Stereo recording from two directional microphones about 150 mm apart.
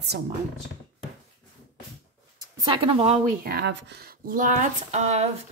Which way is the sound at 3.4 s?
90° right.